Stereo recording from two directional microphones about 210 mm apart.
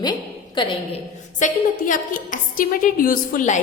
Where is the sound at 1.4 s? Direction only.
40° left (ahead or behind).